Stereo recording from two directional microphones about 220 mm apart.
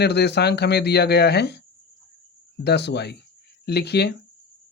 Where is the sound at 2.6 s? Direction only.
50° left (ahead or behind).